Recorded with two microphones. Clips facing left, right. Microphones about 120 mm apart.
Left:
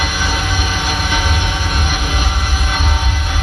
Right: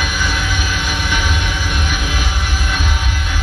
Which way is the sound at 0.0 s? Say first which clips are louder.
Left 1 dB; 35° left (ahead or behind).